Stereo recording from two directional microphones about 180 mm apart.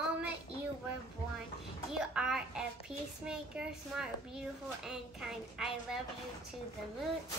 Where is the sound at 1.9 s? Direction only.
5° right (ahead or behind).